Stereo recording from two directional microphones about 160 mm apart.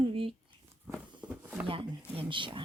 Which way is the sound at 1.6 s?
35° right (ahead or behind).